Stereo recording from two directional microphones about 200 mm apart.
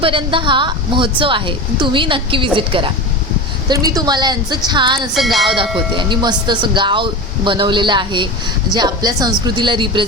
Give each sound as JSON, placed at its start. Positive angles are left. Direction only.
{"t": 0.0, "sound": "speech", "side_deg": -25}
{"t": 5.1, "sound": "speech", "side_deg": 0}
{"t": 6.0, "sound": "speech", "side_deg": -25}